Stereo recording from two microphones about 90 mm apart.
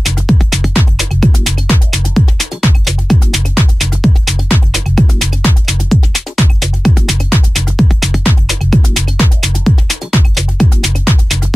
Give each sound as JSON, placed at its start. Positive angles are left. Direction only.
{"t": 0.0, "sound": "music", "side_deg": 0}